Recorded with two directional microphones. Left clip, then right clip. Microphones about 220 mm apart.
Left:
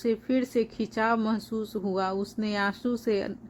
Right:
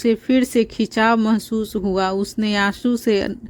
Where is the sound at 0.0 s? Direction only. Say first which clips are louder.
Right 9 dB; 40° right (ahead or behind).